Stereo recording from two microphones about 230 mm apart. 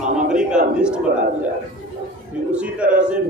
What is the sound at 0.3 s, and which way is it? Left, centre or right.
Speech, centre.